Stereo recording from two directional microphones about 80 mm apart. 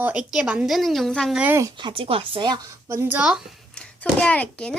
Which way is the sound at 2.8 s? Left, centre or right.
Right.